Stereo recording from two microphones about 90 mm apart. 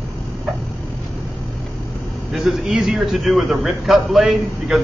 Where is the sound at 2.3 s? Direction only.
5° right (ahead or behind).